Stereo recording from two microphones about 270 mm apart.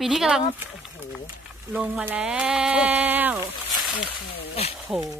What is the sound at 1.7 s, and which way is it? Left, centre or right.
Speech, centre.